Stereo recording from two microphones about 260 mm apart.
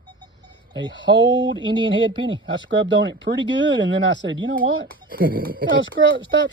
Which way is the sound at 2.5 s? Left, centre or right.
Right.